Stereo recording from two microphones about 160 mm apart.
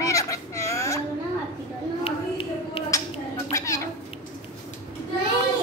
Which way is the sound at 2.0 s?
35° left (ahead or behind).